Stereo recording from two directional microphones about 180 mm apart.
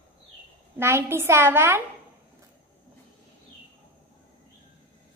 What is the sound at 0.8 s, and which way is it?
A woman's voice, 15° right (ahead or behind).